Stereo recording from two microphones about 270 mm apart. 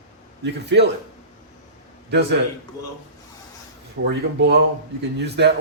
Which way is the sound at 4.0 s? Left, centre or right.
Right.